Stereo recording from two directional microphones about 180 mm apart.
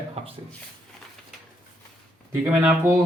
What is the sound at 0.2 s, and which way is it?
Speech, 35° right (ahead or behind).